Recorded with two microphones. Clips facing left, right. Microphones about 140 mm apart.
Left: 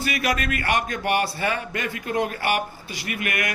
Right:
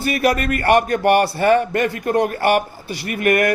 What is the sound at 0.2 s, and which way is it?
A man's voice, 45° right (ahead or behind).